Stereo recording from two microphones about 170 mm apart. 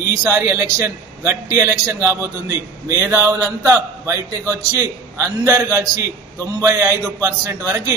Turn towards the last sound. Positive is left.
turn(degrees=-15)  # may be behind; listen again after turning